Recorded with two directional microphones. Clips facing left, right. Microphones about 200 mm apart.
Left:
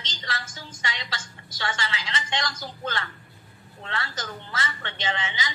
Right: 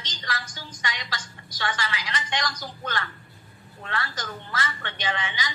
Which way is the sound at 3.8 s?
25° left (ahead or behind).